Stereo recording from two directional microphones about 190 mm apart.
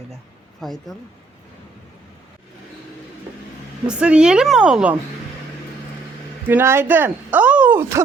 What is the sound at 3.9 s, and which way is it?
A woman's voice, 5° right (ahead or behind).